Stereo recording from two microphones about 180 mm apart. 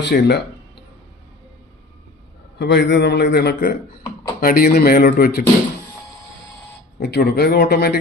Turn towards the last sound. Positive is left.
turn(degrees=65)  # may be behind; listen again after turning